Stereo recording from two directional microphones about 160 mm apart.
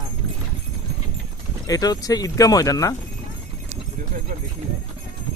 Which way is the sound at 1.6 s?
25° left (ahead or behind).